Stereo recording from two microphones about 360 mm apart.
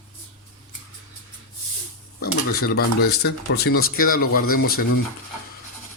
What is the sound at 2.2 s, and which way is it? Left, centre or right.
Speech, left.